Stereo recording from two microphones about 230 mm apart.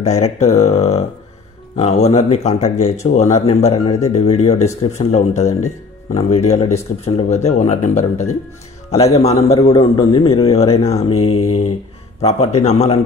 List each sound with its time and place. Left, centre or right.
0.0 s a man's voice: left